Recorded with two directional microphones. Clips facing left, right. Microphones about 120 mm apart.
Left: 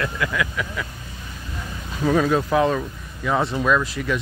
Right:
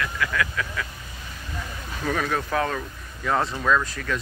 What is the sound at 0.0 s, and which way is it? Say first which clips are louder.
Speech: left 2 dB; 20° left (ahead or behind).